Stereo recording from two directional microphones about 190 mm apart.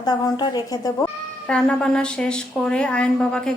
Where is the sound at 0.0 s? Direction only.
20° left (ahead or behind).